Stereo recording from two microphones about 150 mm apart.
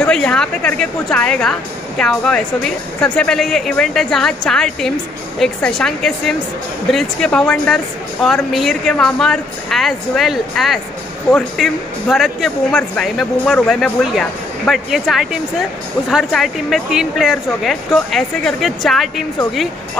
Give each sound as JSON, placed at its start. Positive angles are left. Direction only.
{"t": 0.0, "sound": "a woman's voice", "side_deg": 5}